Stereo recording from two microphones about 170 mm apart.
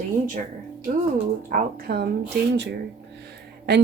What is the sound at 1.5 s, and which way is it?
Speech, 65° right (ahead or behind).